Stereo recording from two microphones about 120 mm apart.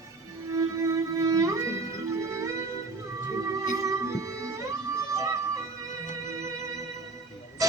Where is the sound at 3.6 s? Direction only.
30° right (ahead or behind).